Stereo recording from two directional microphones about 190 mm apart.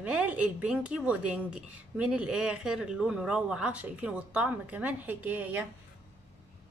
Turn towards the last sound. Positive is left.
turn(degrees=-10)  # may be behind; listen again after turning